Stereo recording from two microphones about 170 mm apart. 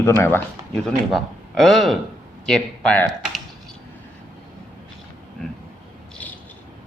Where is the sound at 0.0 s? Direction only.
15° left (ahead or behind).